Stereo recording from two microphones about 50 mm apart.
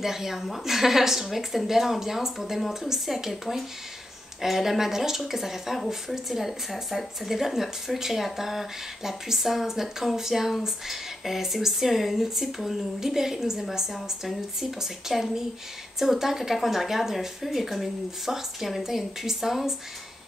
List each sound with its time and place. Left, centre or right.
0.0 s speech: centre